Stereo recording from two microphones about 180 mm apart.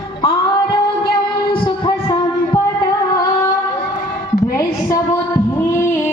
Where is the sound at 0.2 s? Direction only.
30° left (ahead or behind).